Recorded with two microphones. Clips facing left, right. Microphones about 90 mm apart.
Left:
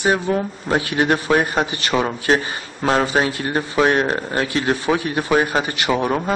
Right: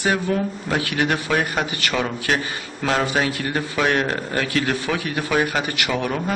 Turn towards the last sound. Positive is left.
turn(degrees=30)  # may be behind; listen again after turning